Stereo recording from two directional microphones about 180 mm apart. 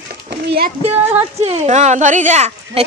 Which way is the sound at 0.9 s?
10° right (ahead or behind).